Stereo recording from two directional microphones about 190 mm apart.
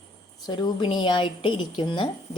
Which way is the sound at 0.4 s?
25° left (ahead or behind).